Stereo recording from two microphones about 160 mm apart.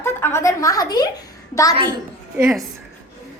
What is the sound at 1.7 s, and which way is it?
Speech, 30° right (ahead or behind).